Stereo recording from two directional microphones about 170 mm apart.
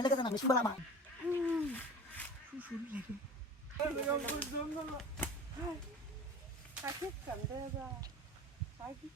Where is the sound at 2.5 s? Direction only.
10° right (ahead or behind).